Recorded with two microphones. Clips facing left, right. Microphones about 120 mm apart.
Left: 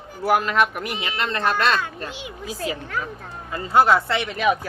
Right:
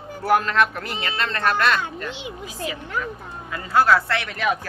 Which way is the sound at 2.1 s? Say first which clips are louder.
Right 2 dB; 25° right (ahead or behind).